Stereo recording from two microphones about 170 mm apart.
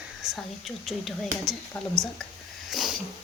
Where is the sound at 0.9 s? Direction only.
Centre (ahead or behind).